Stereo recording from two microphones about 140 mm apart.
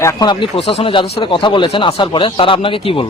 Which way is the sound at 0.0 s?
25° left (ahead or behind).